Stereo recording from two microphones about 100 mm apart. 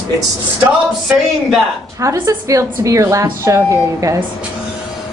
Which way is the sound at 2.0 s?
35° right (ahead or behind).